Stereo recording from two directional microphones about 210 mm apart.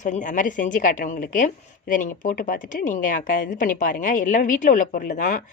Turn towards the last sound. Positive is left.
turn(degrees=35)  # may be behind; listen again after turning